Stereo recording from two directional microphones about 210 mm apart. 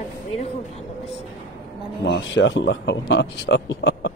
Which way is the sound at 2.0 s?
60° left (ahead or behind).